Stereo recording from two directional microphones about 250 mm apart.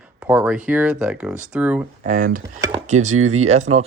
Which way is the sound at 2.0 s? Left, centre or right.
Right.